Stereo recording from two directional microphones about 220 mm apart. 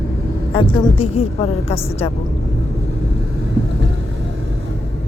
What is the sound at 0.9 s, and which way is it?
Speech, 25° left (ahead or behind).